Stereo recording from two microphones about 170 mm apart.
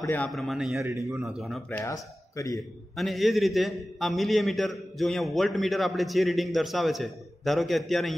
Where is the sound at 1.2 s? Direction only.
Centre (ahead or behind).